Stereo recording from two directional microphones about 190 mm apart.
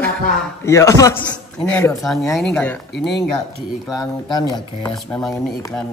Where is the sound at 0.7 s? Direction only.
15° left (ahead or behind).